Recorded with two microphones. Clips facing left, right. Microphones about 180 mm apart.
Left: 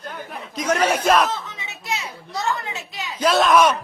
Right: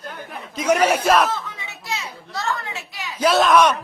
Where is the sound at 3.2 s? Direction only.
Centre (ahead or behind).